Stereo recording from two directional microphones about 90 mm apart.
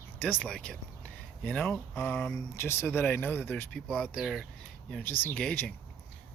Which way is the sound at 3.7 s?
10° left (ahead or behind).